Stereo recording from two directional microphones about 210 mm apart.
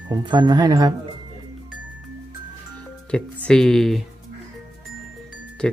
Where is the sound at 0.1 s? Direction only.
20° right (ahead or behind).